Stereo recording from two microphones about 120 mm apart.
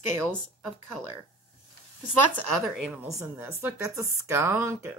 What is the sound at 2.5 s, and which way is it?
Speech, centre (ahead or behind).